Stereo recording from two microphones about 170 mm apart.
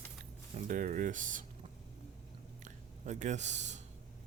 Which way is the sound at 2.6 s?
45° right (ahead or behind).